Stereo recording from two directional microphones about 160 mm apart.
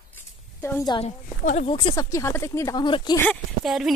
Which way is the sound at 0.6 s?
15° left (ahead or behind).